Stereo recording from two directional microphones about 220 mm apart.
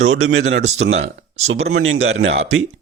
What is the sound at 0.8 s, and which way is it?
Speech, 60° right (ahead or behind).